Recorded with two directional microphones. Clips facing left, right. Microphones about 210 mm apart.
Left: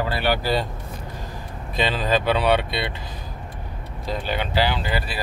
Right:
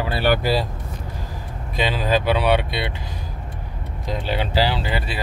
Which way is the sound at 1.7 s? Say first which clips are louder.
Right 1 dB; 10° right (ahead or behind).